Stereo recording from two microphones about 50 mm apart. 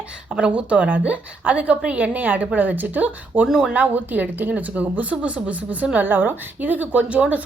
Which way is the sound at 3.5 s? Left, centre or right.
Centre.